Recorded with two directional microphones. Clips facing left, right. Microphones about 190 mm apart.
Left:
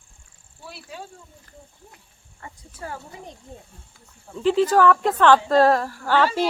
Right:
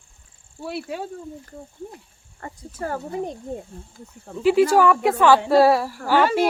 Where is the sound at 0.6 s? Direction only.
65° right (ahead or behind).